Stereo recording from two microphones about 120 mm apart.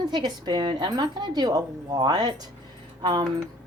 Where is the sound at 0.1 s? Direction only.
40° right (ahead or behind).